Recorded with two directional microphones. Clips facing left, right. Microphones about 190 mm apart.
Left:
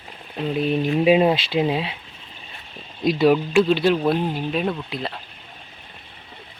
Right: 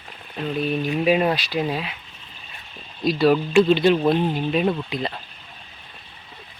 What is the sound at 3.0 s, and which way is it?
Speech, 20° left (ahead or behind).